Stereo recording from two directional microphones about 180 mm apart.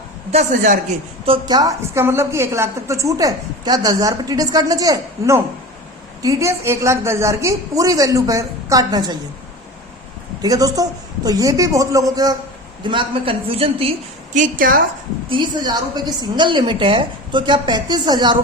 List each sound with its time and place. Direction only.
0.3 s a man's voice: 40° right (ahead or behind)
1.2 s a woman's voice: 25° right (ahead or behind)
10.4 s a woman's voice: 20° right (ahead or behind)
14.3 s a man's voice: 50° right (ahead or behind)
15.3 s a woman's voice: 25° right (ahead or behind)